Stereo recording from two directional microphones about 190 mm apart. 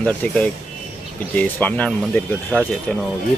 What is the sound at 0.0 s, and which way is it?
Speech, 5° left (ahead or behind).